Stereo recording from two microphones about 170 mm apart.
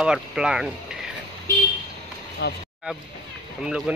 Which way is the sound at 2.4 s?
75° left (ahead or behind).